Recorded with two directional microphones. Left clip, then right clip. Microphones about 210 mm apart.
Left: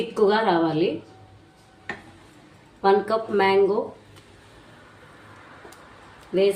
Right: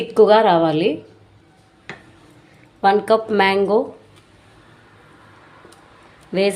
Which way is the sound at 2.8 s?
50° right (ahead or behind).